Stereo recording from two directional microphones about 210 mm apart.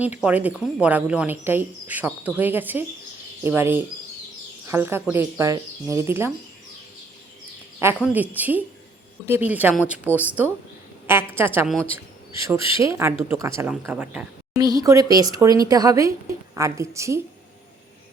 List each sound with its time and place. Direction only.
0.0 s speech: 5° right (ahead or behind)
7.8 s speech: 10° right (ahead or behind)
14.6 s speech: 20° right (ahead or behind)